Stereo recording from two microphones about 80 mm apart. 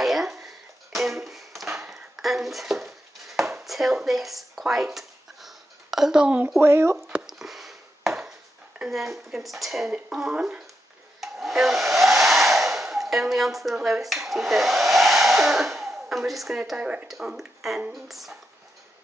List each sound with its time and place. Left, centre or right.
0.0 s a sound: centre
6.6 s speech: right
7.1 s a sound: centre
8.7 s speech: centre
11.1 s hair dryer: centre
17.1 s speech: centre